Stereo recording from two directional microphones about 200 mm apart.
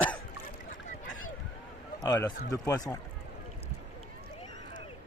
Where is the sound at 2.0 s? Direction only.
20° left (ahead or behind).